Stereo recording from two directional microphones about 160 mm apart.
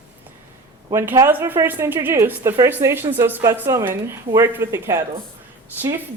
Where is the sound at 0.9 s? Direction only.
15° right (ahead or behind).